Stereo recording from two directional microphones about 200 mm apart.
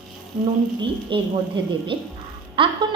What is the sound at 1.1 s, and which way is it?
A woman's voice, 25° right (ahead or behind).